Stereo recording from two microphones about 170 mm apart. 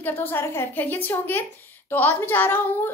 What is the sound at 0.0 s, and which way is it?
A child's voice, 10° left (ahead or behind).